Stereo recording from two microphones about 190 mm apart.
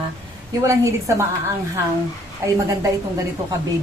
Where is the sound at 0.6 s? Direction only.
15° right (ahead or behind).